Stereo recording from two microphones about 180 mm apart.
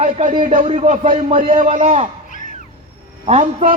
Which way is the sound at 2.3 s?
45° left (ahead or behind).